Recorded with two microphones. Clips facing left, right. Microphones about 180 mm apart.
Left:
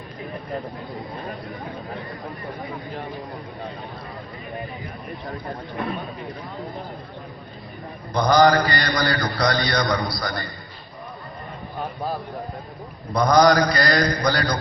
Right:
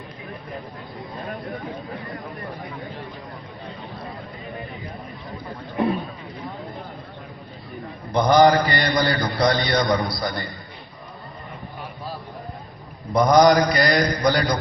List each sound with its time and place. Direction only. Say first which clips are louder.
8.1 s a man's voice: right 1 dB; 25° right (ahead or behind)
13.1 s a man's voice: right 1 dB; 20° right (ahead or behind)